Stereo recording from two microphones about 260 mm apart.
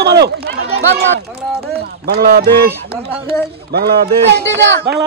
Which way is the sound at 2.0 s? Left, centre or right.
Right.